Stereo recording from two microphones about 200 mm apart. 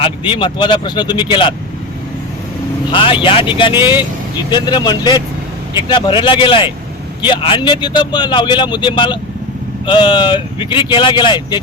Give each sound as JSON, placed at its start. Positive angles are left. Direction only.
{"t": 0.0, "sound": "speech", "side_deg": 25}
{"t": 2.9, "sound": "speech", "side_deg": 25}